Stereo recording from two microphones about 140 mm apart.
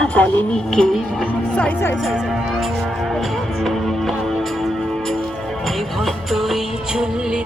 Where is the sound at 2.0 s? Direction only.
Centre (ahead or behind).